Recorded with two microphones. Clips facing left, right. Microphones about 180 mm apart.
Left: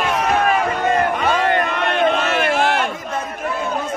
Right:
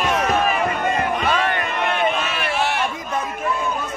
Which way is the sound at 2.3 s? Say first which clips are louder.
Left 5 dB; 50° left (ahead or behind).